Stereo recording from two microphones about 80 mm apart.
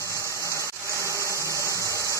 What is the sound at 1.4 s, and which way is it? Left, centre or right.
Engine, right.